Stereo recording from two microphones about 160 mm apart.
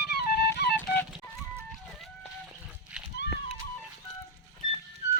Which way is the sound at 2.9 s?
5° right (ahead or behind).